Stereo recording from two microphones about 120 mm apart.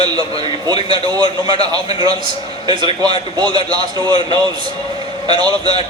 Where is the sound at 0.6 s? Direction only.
35° right (ahead or behind).